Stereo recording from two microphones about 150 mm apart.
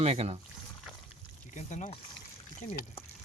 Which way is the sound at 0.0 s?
45° right (ahead or behind).